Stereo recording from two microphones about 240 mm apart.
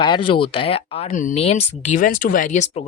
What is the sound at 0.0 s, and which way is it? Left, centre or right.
Speech, left.